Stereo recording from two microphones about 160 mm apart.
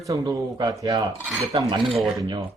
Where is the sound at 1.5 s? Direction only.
30° right (ahead or behind).